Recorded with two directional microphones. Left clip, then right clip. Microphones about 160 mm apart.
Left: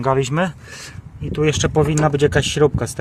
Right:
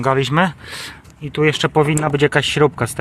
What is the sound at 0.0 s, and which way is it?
Speech, centre (ahead or behind).